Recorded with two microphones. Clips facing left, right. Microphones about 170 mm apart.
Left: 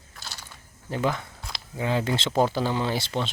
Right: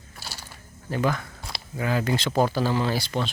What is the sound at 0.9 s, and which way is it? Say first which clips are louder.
Speech: right 1 dB; 20° left (ahead or behind).